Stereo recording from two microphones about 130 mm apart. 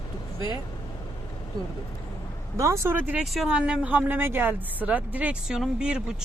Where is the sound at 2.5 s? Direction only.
25° right (ahead or behind).